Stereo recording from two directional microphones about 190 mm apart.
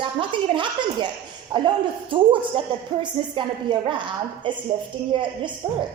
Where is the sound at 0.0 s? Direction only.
25° right (ahead or behind).